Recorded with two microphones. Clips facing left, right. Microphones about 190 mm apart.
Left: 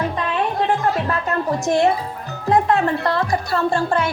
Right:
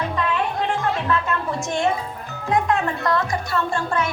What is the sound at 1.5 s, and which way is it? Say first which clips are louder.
Speech: left 8 dB; 35° left (ahead or behind).